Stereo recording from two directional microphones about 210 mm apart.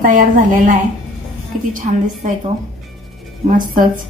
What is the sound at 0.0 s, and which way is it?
Speech, 40° right (ahead or behind).